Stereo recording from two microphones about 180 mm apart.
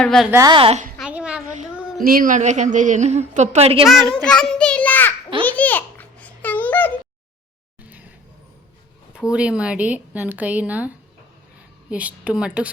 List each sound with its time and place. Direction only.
0.0 s a woman's voice: 5° left (ahead or behind)
0.3 s a woman's voice: 15° right (ahead or behind)
0.5 s a woman's voice: 35° right (ahead or behind)
0.9 s a sound: 5° right (ahead or behind)
2.0 s a woman's voice: 50° right (ahead or behind); by 3.8 s 35° right (ahead or behind)
4.1 s a child's voice: 5° left (ahead or behind)
5.5 s babbling: 10° left (ahead or behind)
7.8 s a sound: 10° right (ahead or behind)
9.3 s a woman's voice: 5° right (ahead or behind)